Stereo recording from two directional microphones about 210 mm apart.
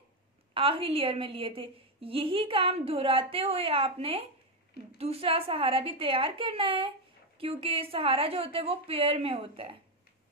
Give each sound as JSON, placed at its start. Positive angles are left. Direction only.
{"t": 0.6, "sound": "a woman's voice", "side_deg": -25}